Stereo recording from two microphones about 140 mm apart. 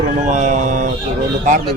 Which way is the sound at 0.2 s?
65° right (ahead or behind).